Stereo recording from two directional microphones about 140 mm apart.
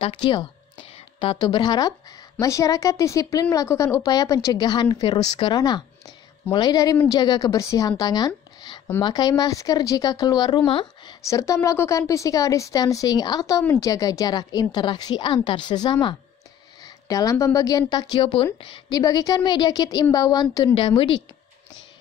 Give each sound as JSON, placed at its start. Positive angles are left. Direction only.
{"t": 0.0, "sound": "a woman's voice", "side_deg": 35}
{"t": 11.2, "sound": "a woman's voice", "side_deg": 20}
{"t": 17.1, "sound": "a woman's voice", "side_deg": 25}
{"t": 18.1, "sound": "a woman's voice", "side_deg": 40}
{"t": 20.7, "sound": "speech", "side_deg": 40}